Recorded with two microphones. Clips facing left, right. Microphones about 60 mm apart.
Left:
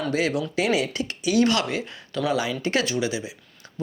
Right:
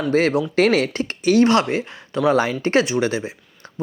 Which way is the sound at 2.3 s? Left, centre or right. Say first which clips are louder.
Right 7 dB; right.